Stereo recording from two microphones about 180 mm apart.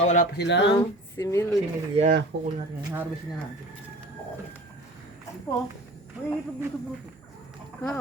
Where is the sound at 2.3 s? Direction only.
65° right (ahead or behind).